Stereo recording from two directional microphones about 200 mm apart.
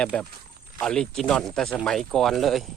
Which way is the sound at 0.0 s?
5° left (ahead or behind).